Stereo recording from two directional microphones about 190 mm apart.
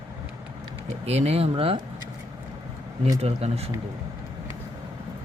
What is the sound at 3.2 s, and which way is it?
Speech, 30° right (ahead or behind).